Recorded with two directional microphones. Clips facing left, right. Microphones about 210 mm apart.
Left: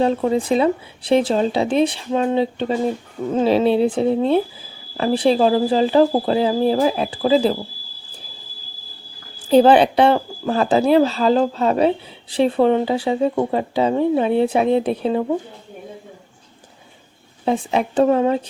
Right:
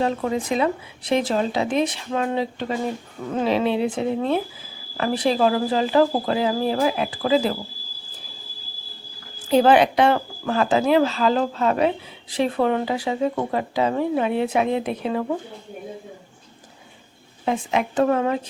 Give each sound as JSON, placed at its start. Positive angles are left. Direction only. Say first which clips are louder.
{"t": 0.0, "sound": "speech", "louder": "left 5 dB", "side_deg": 30}
{"t": 9.5, "sound": "speech", "louder": "left 4 dB", "side_deg": 30}
{"t": 17.4, "sound": "speech", "louder": "left 3 dB", "side_deg": 30}